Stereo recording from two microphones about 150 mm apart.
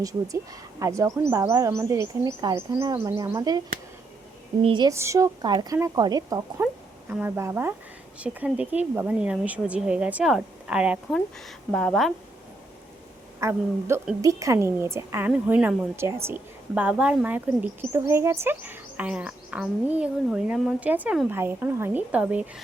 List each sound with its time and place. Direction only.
0.8 s a woman's voice: 20° right (ahead or behind)
4.9 s speech: 20° right (ahead or behind)
7.1 s a woman's voice: 15° right (ahead or behind)
11.7 s a woman's voice: 5° left (ahead or behind)
13.4 s a woman's voice: 15° right (ahead or behind)